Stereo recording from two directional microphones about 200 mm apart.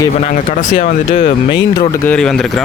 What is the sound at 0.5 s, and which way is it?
Speech, 40° left (ahead or behind).